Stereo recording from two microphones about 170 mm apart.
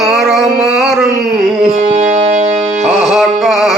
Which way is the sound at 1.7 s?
45° right (ahead or behind).